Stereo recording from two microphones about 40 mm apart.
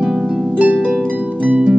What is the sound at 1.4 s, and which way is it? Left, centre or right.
Harp, right.